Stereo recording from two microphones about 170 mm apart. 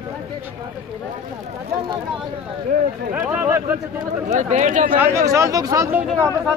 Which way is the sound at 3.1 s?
10° right (ahead or behind).